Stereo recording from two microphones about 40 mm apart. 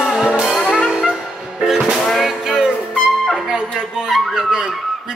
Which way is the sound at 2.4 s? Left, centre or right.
Centre.